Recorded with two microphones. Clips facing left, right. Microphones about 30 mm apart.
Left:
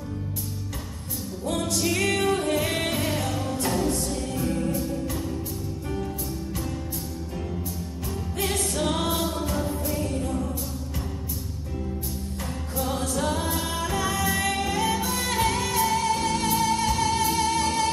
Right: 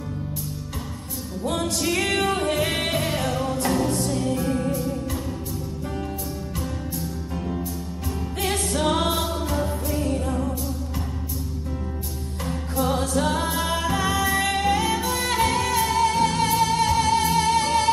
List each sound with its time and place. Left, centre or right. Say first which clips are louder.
1.4 s music: right 2 dB; right
7.3 s music: right 4 dB; centre
8.5 s music: right 4 dB; right
9.4 s music: right 2 dB; centre
12.4 s music: right 6 dB; centre
14.5 s music: right 5 dB; right
14.8 s music: right 2 dB; centre